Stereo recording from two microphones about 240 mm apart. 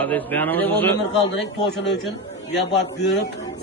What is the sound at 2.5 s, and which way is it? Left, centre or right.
Speech, left.